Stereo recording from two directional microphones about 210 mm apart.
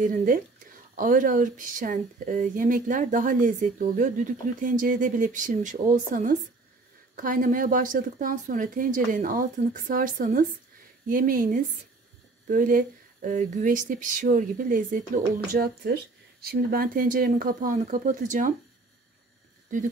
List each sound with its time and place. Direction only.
0.0 s speech: 40° right (ahead or behind)